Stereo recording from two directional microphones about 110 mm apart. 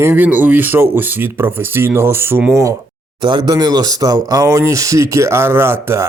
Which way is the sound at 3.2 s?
45° right (ahead or behind).